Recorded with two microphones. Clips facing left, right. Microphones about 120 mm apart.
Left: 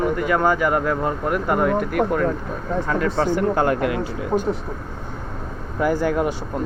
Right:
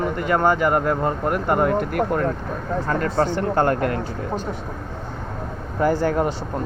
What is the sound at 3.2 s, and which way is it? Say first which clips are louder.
Speech: left 1 dB; 10° left (ahead or behind).